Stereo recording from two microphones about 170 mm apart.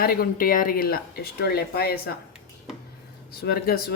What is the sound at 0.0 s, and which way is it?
Speech, 60° left (ahead or behind).